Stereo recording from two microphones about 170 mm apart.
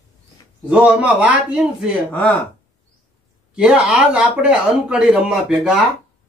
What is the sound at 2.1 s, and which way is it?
Speech, 5° left (ahead or behind).